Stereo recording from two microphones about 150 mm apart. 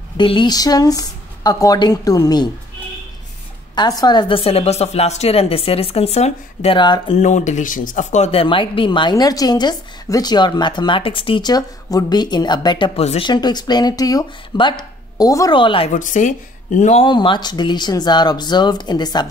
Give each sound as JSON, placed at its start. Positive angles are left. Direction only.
{"t": 0.2, "sound": "speech", "side_deg": 30}
{"t": 3.7, "sound": "speech", "side_deg": 25}
{"t": 7.2, "sound": "speech", "side_deg": 55}
{"t": 13.3, "sound": "speech", "side_deg": 30}
{"t": 15.9, "sound": "speech", "side_deg": 55}
{"t": 17.0, "sound": "speech", "side_deg": 30}